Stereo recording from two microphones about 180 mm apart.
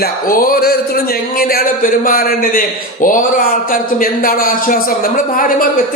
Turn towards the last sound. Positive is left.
turn(degrees=50)  # may be behind; listen again after turning